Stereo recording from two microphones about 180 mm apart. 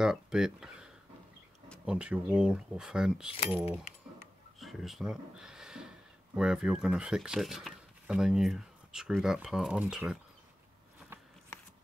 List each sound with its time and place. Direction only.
0.0 s speech: 5° right (ahead or behind)
1.9 s speech: 5° right (ahead or behind)